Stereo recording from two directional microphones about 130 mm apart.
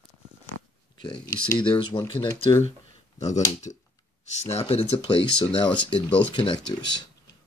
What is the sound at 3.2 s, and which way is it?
Speech, 65° left (ahead or behind).